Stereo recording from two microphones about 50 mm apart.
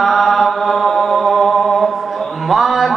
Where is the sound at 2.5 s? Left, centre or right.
Centre.